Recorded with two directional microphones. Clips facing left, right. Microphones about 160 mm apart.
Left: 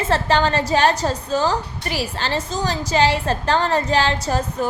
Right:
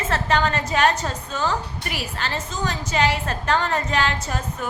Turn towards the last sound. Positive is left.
turn(degrees=35)  # may be behind; listen again after turning